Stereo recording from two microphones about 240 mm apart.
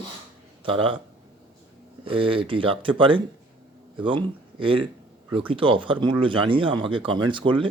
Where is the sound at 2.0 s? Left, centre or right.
Right.